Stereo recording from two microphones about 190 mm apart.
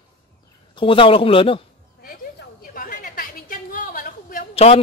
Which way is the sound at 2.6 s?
50° left (ahead or behind).